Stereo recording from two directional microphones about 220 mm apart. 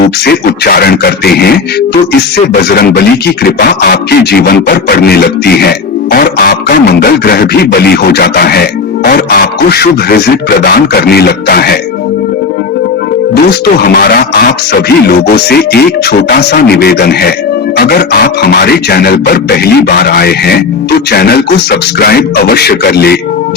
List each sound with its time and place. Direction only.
0.3 s speech: 45° left (ahead or behind)
13.3 s speech: 45° left (ahead or behind)